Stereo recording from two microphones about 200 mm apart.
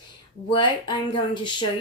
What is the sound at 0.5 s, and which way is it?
Speech, 25° left (ahead or behind).